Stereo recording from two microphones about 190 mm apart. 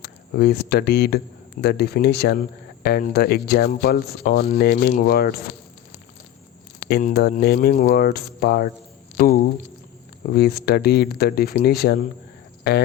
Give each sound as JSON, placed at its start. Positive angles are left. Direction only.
{"t": 0.0, "sound": "speech", "side_deg": 60}
{"t": 6.8, "sound": "speech", "side_deg": 55}